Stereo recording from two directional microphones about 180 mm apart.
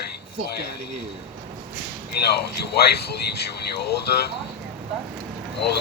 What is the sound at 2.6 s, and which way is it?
Speech, 65° left (ahead or behind).